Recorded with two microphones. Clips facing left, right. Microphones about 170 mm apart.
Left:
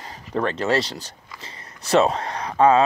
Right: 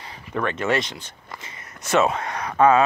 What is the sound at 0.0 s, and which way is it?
Speech, 40° left (ahead or behind).